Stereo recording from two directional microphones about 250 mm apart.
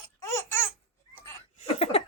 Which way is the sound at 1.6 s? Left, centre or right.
Left.